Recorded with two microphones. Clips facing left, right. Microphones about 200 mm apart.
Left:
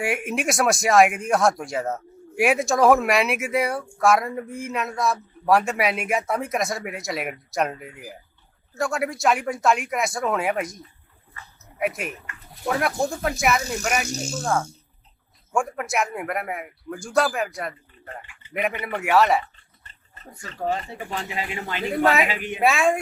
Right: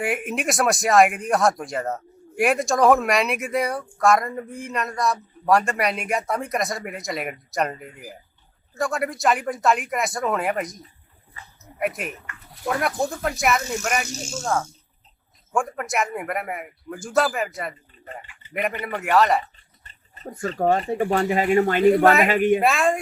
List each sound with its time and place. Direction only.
0.0 s speech: centre (ahead or behind)
15.5 s speech: centre (ahead or behind)
20.3 s speech: 55° right (ahead or behind)
22.6 s speech: centre (ahead or behind)